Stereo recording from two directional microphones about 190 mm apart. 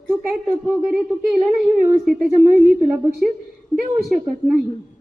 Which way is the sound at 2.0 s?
10° right (ahead or behind).